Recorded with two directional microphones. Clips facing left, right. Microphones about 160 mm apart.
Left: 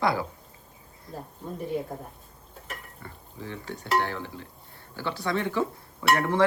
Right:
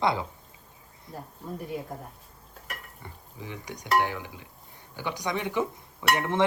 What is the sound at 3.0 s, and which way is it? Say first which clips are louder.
Speech: left 2 dB; 15° right (ahead or behind).